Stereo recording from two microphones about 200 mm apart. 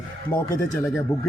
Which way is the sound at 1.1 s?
15° left (ahead or behind).